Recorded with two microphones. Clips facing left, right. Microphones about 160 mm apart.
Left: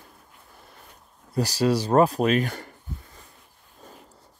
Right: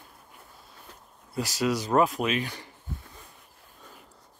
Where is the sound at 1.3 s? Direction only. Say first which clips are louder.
Left 5 dB; 35° left (ahead or behind).